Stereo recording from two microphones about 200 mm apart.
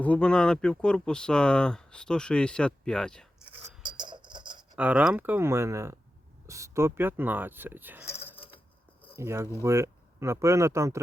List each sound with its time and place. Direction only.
0.0 s speech: 5° left (ahead or behind)
3.8 s a sound: 25° right (ahead or behind)
4.8 s speech: 5° right (ahead or behind)
8.0 s coin: 10° left (ahead or behind)
9.1 s speech: 10° right (ahead or behind)